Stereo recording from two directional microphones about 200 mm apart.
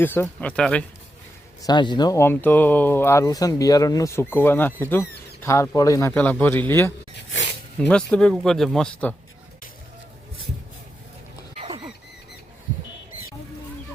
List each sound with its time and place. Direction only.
0.0 s speech: 10° left (ahead or behind)
1.6 s speech: 20° left (ahead or behind); by 9.1 s 5° left (ahead or behind)
11.5 s rodents: 30° right (ahead or behind)